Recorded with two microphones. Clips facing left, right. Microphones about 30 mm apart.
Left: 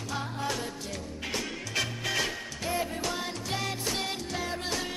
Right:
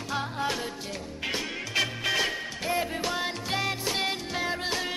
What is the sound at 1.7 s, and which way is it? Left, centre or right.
Music, centre.